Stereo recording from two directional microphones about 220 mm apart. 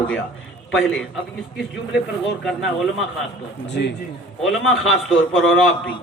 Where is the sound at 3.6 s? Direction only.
50° left (ahead or behind).